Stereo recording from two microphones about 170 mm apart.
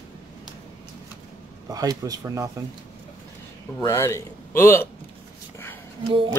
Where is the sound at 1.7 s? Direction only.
20° right (ahead or behind).